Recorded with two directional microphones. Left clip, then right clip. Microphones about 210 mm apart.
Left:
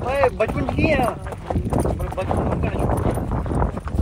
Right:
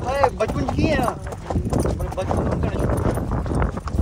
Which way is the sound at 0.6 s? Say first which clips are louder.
Left 2 dB; 20° right (ahead or behind).